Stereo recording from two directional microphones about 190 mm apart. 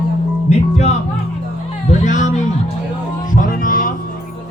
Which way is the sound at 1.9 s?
40° left (ahead or behind).